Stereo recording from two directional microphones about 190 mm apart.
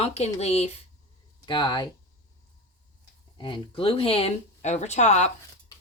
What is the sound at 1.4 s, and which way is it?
Speech, 25° left (ahead or behind).